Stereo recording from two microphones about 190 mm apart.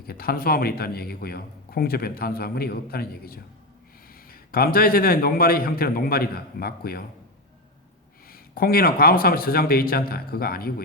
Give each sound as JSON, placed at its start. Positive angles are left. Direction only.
{"t": 0.0, "sound": "speech", "side_deg": 55}
{"t": 8.3, "sound": "speech", "side_deg": 50}